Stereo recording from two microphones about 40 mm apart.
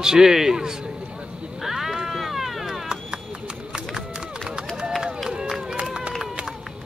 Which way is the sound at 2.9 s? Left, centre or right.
Right.